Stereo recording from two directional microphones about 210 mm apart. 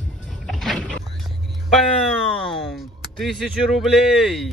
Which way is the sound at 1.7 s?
Centre (ahead or behind).